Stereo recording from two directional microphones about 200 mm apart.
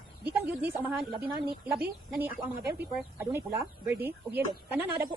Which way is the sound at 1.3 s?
20° right (ahead or behind).